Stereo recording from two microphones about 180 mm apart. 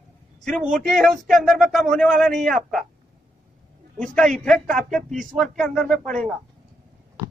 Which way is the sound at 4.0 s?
5° left (ahead or behind).